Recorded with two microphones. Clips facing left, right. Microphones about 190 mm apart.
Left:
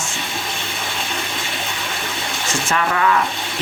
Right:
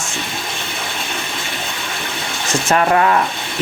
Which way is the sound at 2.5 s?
40° right (ahead or behind).